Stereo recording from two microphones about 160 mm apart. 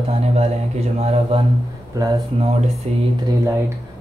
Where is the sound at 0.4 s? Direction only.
40° right (ahead or behind).